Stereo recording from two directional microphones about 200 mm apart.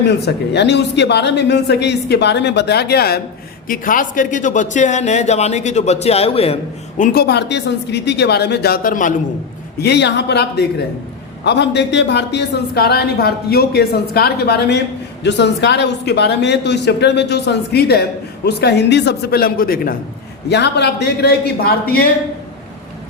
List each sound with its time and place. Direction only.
0.0 s a woman's voice: 55° left (ahead or behind); by 6.6 s 30° left (ahead or behind)
7.0 s a woman's voice: 50° left (ahead or behind)
9.8 s a woman's voice: 55° left (ahead or behind)
20.5 s a man's voice: 55° left (ahead or behind)